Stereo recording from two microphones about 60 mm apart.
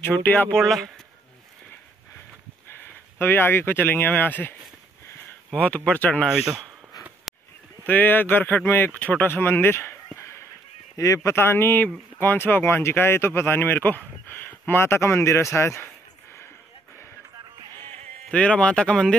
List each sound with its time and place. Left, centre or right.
0.0 s speech: left
0.6 s speech: centre
2.8 s speech: left
5.9 s speech: left
6.2 s speech: centre
7.3 s honk: centre
7.8 s speech: left
8.9 s speech: left
9.3 s speech: left
18.3 s speech: centre